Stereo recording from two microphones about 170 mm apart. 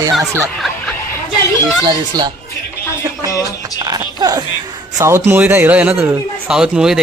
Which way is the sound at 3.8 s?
25° right (ahead or behind).